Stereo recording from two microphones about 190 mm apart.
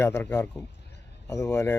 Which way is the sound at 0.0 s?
10° left (ahead or behind).